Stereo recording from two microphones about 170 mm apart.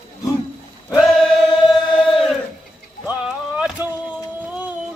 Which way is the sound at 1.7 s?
Centre (ahead or behind).